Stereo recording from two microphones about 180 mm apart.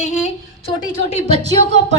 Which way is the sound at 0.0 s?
40° left (ahead or behind).